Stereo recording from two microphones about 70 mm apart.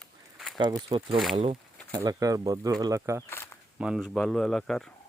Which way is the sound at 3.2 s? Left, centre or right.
Left.